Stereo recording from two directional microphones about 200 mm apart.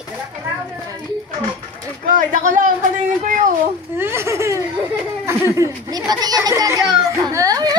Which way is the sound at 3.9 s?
10° right (ahead or behind).